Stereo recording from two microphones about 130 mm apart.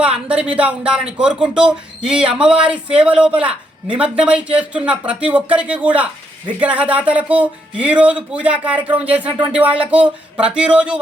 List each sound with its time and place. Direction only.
0.0 s speech: 10° right (ahead or behind)